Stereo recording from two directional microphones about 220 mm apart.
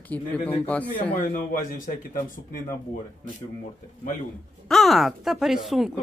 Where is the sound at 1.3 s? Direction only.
40° left (ahead or behind).